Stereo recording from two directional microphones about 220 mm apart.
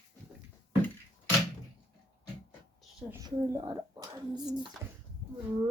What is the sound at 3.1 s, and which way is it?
Speech, 15° right (ahead or behind).